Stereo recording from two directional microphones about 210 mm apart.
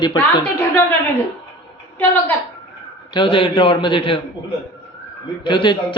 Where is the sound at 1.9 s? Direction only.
10° left (ahead or behind).